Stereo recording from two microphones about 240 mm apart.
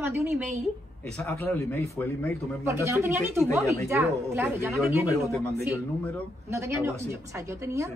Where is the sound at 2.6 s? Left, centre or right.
Centre.